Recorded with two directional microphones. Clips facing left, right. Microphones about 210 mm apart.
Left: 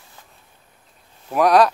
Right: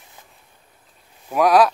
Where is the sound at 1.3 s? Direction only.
Centre (ahead or behind).